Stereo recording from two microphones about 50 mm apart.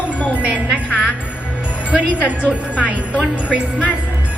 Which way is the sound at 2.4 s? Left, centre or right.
Left.